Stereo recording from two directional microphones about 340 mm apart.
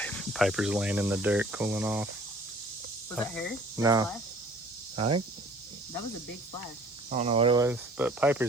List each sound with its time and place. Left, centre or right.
0.0 s speech: centre
3.2 s speech: centre
3.8 s speech: centre
7.1 s speech: centre